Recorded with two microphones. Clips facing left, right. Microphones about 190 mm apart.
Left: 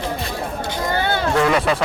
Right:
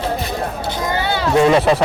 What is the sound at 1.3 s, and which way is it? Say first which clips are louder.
Speech: right 7 dB; 25° right (ahead or behind).